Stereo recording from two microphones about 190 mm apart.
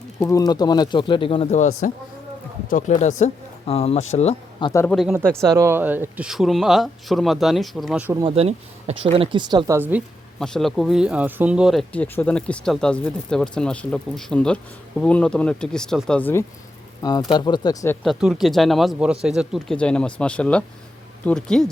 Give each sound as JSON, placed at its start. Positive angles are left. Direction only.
{"t": 0.2, "sound": "speech", "side_deg": 15}
{"t": 4.7, "sound": "speech", "side_deg": 15}
{"t": 4.9, "sound": "speech", "side_deg": -10}
{"t": 8.2, "sound": "speech", "side_deg": -35}
{"t": 10.4, "sound": "speech", "side_deg": 0}
{"t": 18.0, "sound": "speech", "side_deg": 0}